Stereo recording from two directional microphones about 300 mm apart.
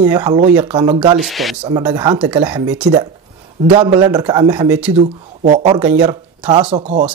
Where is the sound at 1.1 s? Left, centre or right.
Centre.